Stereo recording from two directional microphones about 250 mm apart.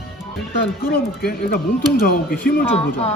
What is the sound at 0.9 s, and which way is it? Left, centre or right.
Speech, left.